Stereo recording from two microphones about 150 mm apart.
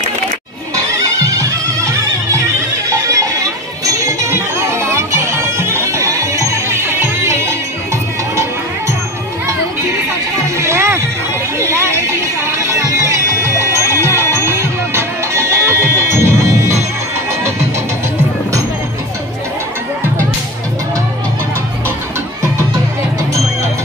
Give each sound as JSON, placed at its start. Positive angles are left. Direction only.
{"t": 1.0, "sound": "music", "side_deg": -20}
{"t": 10.6, "sound": "music", "side_deg": -15}